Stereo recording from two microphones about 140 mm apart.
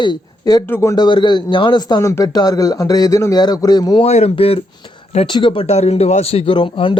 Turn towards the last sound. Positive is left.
turn(degrees=35)  # may be behind; listen again after turning